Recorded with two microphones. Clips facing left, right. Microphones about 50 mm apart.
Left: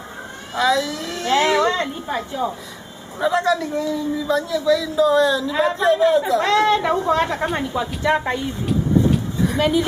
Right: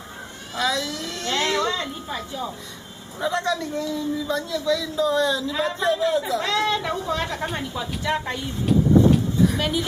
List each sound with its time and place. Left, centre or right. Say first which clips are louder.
0.6 s speech: left 6 dB; centre
1.7 s a woman's voice: left 5 dB; left
3.2 s speech: left 5 dB; centre
6.4 s a woman's voice: left 6 dB; left
8.6 s vehicle: right 2 dB; centre
9.6 s speech: left 6 dB; centre